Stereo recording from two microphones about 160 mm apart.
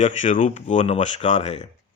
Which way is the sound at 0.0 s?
50° left (ahead or behind).